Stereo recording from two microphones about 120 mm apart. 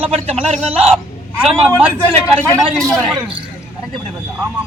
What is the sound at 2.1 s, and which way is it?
Speech, 10° left (ahead or behind).